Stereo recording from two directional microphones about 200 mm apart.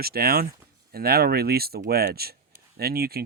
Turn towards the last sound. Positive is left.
turn(degrees=-50)  # may be behind; listen again after turning